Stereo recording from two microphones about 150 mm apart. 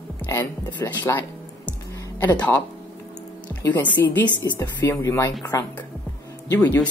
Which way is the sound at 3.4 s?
10° left (ahead or behind).